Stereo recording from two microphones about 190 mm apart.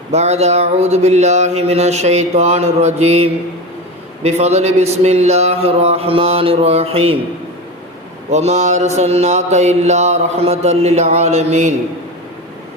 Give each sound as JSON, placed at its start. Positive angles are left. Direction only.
{"t": 0.1, "sound": "mantra", "side_deg": -35}
{"t": 8.3, "sound": "mantra", "side_deg": -35}